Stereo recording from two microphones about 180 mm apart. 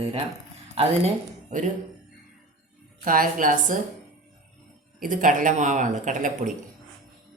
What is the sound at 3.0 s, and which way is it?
Speech, 50° right (ahead or behind).